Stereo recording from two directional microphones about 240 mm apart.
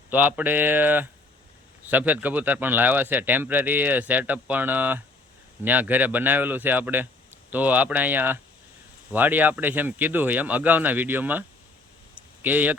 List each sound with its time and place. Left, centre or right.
0.1 s a man's voice: centre